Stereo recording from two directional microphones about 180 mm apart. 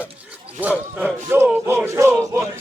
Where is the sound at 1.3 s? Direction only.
15° right (ahead or behind).